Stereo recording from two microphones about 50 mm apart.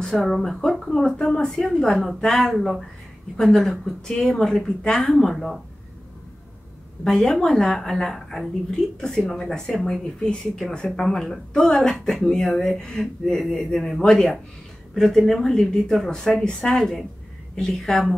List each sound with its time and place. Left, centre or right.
0.0 s a woman's voice: centre
3.8 s a woman's voice: centre
7.1 s a woman's voice: centre
14.0 s a woman's voice: centre